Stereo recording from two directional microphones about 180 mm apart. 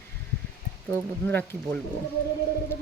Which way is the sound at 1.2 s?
10° left (ahead or behind).